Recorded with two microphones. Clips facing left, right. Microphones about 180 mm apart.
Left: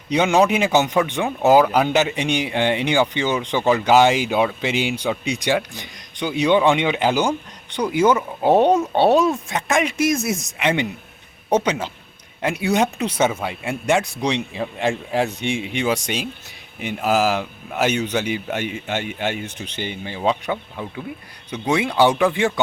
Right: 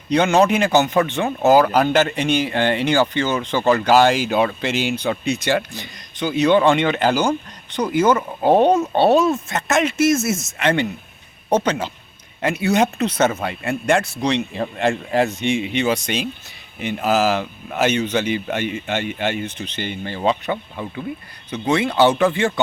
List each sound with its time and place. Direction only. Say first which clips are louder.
0.1 s speech: right 1 dB; 10° left (ahead or behind)
1.0 s speech: right 1 dB; 15° left (ahead or behind)
1.5 s speech: even; centre (ahead or behind)
2.1 s speech: right 2 dB; 15° left (ahead or behind)
3.7 s speech: right 1 dB; 5° left (ahead or behind)
8.0 s speech: left 1 dB; centre (ahead or behind)
9.0 s speech: right 1 dB; 15° left (ahead or behind)